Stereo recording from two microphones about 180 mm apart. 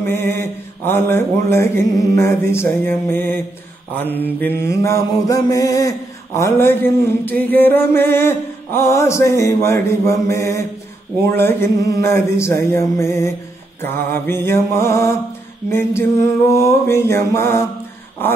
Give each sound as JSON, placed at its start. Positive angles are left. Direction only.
{"t": 0.0, "sound": "mantra", "side_deg": 15}